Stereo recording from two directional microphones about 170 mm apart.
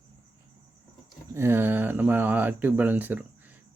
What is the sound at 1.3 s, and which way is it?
Speech, 15° right (ahead or behind).